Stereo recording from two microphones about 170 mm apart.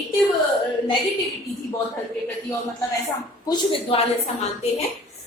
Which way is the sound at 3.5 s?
30° left (ahead or behind).